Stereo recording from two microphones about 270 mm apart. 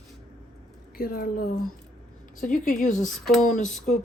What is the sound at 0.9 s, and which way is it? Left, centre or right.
Speech, left.